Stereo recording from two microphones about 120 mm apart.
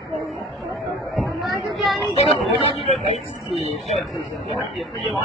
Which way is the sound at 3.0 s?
60° left (ahead or behind).